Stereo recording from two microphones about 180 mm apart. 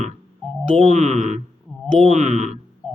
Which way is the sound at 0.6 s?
35° right (ahead or behind).